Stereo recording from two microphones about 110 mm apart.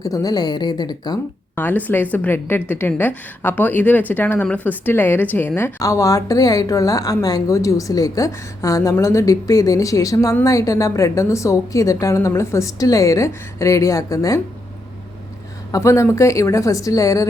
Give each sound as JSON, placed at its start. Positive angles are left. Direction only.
{"t": 0.0, "sound": "a woman's voice", "side_deg": 35}
{"t": 1.5, "sound": "a woman's voice", "side_deg": 20}
{"t": 5.8, "sound": "a woman's voice", "side_deg": 30}
{"t": 15.7, "sound": "a woman's voice", "side_deg": 25}